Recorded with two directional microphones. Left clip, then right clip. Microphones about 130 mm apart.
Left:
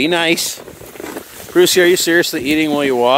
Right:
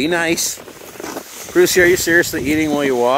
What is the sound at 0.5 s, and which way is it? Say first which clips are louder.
Vehicle: left 1 dB; 75° left (ahead or behind).